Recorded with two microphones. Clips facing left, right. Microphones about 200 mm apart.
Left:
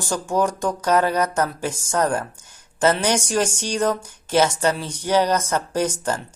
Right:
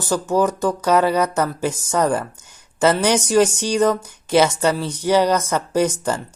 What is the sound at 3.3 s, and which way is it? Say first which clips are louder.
Speech: right 6 dB; 10° right (ahead or behind).